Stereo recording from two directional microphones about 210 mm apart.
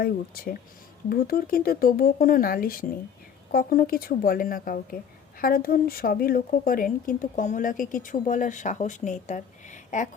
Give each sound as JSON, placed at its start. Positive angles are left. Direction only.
{"t": 0.0, "sound": "speech", "side_deg": 45}